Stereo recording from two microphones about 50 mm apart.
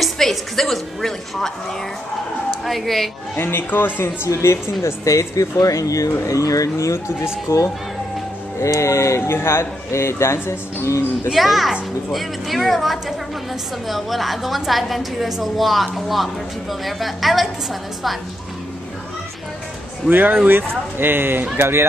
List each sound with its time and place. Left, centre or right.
0.0 s a woman's voice: centre
3.3 s speech: left
4.0 s speech: left
7.4 s speech: left
9.2 s speech: left
11.3 s a woman's voice: centre
20.1 s speech: right